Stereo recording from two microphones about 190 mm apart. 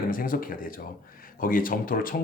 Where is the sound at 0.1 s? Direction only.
45° left (ahead or behind).